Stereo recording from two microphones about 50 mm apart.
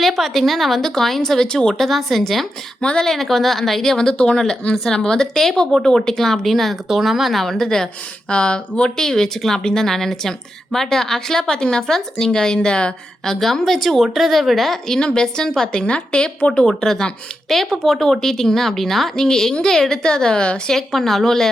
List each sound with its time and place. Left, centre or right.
0.0 s a woman's voice: centre
9.0 s a woman's voice: centre
20.7 s a woman's voice: centre